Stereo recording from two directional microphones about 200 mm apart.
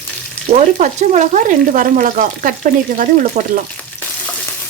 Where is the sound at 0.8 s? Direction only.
35° right (ahead or behind).